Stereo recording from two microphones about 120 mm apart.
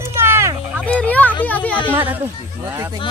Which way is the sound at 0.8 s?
10° left (ahead or behind).